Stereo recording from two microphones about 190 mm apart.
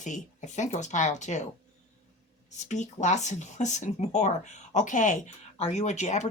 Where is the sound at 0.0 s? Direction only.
40° left (ahead or behind).